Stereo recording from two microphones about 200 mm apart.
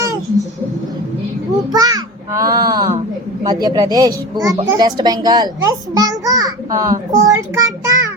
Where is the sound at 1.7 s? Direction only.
20° right (ahead or behind).